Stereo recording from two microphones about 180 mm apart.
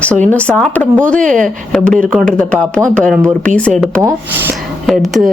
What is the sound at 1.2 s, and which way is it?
Speech, 45° right (ahead or behind).